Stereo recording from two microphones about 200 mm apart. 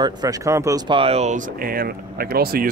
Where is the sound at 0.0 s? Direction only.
20° right (ahead or behind).